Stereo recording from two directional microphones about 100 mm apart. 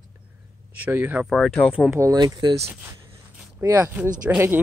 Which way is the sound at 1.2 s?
Centre (ahead or behind).